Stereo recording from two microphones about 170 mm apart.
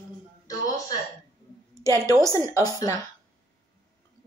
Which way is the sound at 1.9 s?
15° right (ahead or behind).